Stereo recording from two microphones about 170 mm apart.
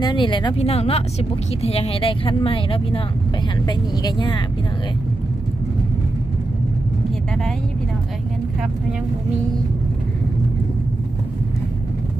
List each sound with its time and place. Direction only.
0.0 s speech: 25° left (ahead or behind)